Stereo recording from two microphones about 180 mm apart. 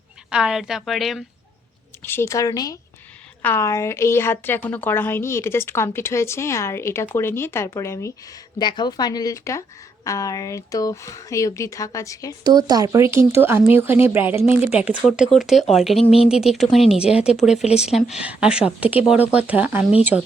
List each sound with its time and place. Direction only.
0.3 s a woman's voice: 5° right (ahead or behind)
2.0 s a woman's voice: 15° left (ahead or behind)
12.4 s a woman's voice: 20° right (ahead or behind); by 16.0 s centre (ahead or behind)
16.0 s speech: 35° left (ahead or behind)
16.3 s a woman's voice: centre (ahead or behind)